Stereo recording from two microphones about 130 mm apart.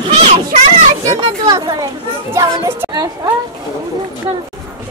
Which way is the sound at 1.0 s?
30° right (ahead or behind).